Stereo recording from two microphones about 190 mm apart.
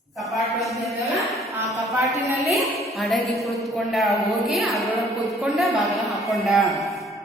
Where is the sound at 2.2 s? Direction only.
15° right (ahead or behind).